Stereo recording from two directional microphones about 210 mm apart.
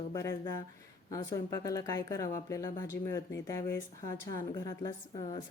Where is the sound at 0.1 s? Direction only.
15° left (ahead or behind).